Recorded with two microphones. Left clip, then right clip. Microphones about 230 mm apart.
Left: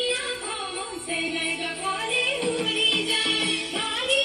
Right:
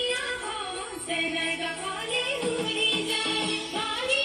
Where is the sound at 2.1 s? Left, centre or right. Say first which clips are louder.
Left 2 dB; left.